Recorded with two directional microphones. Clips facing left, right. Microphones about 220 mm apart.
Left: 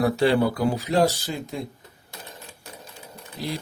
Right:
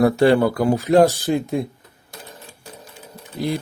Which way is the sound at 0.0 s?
50° right (ahead or behind).